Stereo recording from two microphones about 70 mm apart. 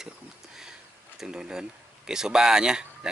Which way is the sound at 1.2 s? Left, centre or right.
Centre.